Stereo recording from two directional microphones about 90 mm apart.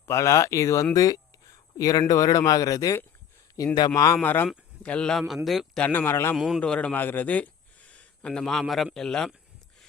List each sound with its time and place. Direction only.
0.0 s a man's voice: 30° left (ahead or behind)
4.2 s a man's voice: 20° left (ahead or behind); by 5.8 s centre (ahead or behind)
5.8 s speech: 20° left (ahead or behind)
6.3 s a man's voice: 5° right (ahead or behind)
6.6 s speech: 15° left (ahead or behind)